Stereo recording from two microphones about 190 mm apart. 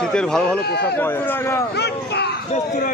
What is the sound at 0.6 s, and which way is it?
Speech, 60° left (ahead or behind).